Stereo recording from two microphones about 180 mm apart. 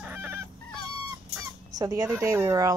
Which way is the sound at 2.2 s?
20° right (ahead or behind).